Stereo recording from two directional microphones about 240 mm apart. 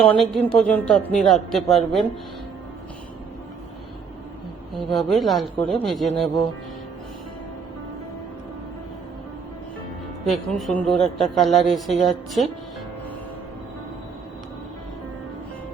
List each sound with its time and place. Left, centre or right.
0.1 s a woman's voice: centre
4.7 s a woman's voice: centre
10.2 s a woman's voice: centre